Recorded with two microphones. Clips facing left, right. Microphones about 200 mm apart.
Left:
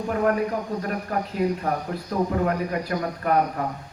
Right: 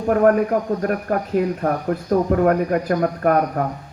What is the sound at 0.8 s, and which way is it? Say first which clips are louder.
Speech: right 6 dB; 50° right (ahead or behind).